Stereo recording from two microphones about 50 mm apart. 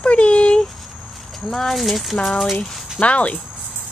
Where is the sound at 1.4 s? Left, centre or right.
Centre.